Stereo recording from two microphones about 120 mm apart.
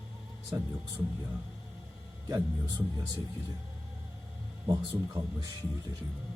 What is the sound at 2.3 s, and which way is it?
Speech, 35° right (ahead or behind).